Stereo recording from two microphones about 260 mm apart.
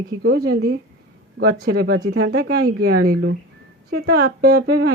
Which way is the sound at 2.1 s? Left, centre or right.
Right.